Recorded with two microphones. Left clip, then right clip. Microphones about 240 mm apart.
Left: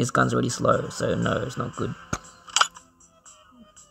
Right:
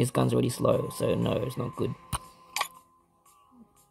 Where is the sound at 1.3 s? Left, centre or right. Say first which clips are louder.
Left 3 dB; centre.